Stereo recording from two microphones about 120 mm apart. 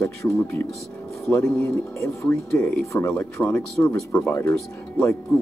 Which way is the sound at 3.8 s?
25° left (ahead or behind).